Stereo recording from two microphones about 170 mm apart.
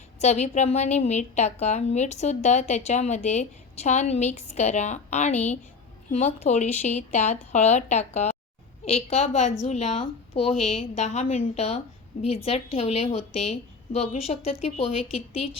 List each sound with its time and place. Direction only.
0.2 s a woman's voice: 40° left (ahead or behind)